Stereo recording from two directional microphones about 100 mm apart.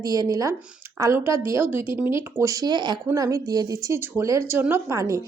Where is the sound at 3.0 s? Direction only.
30° right (ahead or behind).